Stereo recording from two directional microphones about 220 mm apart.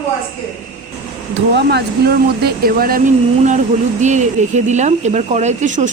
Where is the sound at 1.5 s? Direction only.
45° right (ahead or behind).